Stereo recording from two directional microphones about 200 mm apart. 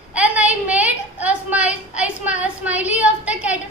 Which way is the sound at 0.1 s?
5° right (ahead or behind).